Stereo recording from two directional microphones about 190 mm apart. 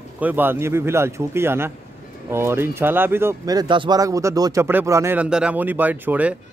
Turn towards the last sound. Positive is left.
turn(degrees=-10)  # may be behind; listen again after turning